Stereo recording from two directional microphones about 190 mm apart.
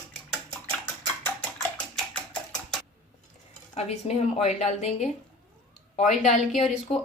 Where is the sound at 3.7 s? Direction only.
35° left (ahead or behind).